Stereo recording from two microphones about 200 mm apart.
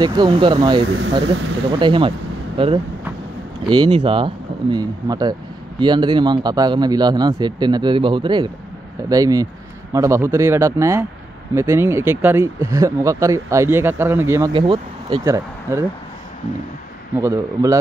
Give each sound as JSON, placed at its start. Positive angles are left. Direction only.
{"t": 0.0, "sound": "speech", "side_deg": -20}
{"t": 0.8, "sound": "speech", "side_deg": -65}
{"t": 1.8, "sound": "speech", "side_deg": -25}
{"t": 14.5, "sound": "speech", "side_deg": -25}
{"t": 17.2, "sound": "speech", "side_deg": -15}